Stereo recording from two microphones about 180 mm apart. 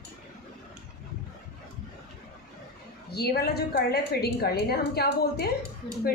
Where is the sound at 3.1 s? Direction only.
60° left (ahead or behind).